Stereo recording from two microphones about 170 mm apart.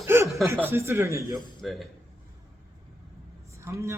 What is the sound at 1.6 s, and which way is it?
Speech, centre (ahead or behind).